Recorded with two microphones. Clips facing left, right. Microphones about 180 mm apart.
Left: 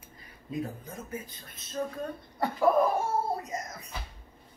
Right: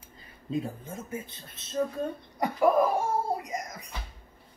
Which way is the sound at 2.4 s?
15° right (ahead or behind).